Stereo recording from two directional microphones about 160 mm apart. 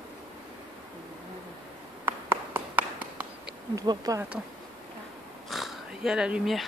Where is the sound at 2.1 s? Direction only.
15° right (ahead or behind).